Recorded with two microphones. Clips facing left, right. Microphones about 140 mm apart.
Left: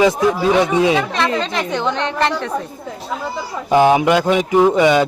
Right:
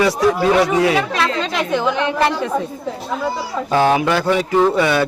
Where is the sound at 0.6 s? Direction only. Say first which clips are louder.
Left 1 dB; 20° left (ahead or behind).